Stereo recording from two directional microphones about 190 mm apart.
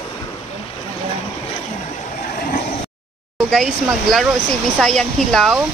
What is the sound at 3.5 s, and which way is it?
Speech, centre (ahead or behind).